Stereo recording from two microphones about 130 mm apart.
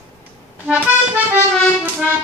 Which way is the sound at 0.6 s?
10° right (ahead or behind).